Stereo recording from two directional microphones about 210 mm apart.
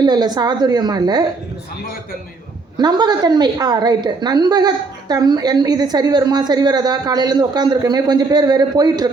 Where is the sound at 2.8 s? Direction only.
20° right (ahead or behind).